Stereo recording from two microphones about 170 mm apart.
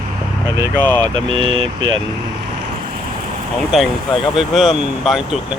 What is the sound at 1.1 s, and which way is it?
Speech, 30° right (ahead or behind).